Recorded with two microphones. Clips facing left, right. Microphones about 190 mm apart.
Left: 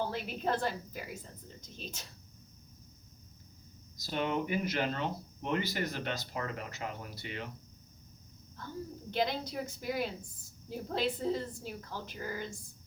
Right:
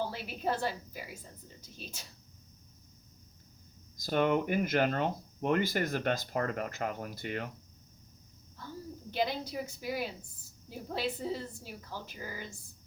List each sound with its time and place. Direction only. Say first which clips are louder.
0.0 s a woman's voice: even; 10° right (ahead or behind)
3.9 s speech: right 5 dB; 50° right (ahead or behind)
9.0 s a woman's voice: even; 10° right (ahead or behind)